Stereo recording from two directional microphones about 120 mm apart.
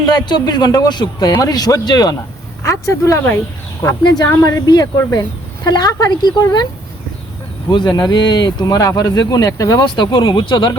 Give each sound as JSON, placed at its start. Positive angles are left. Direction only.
{"t": 0.1, "sound": "speech", "side_deg": 40}
{"t": 2.6, "sound": "speech", "side_deg": 25}
{"t": 4.4, "sound": "speech", "side_deg": 30}
{"t": 7.7, "sound": "speech", "side_deg": 35}
{"t": 9.8, "sound": "speech", "side_deg": 40}